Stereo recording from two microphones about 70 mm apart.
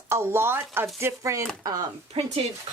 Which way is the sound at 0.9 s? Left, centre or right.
Right.